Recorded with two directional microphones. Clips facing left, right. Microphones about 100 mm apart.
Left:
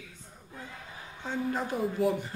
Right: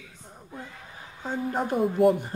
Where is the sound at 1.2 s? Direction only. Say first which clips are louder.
Right 3 dB; 45° right (ahead or behind).